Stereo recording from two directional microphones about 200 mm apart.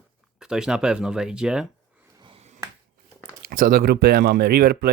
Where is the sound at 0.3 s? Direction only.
5° right (ahead or behind).